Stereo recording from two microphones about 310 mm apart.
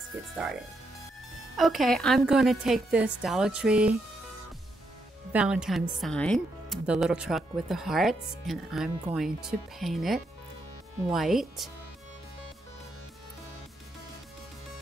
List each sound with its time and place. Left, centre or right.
0.1 s speech: centre
1.6 s speech: centre
5.3 s speech: centre